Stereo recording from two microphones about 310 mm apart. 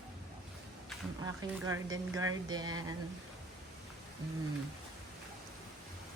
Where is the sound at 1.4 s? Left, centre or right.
Centre.